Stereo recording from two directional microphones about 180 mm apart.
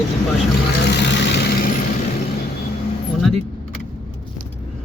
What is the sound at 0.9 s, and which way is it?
Vehicle, 70° left (ahead or behind).